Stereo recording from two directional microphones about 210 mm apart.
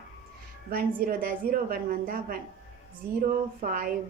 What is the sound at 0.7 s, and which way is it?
A woman's voice, 45° right (ahead or behind).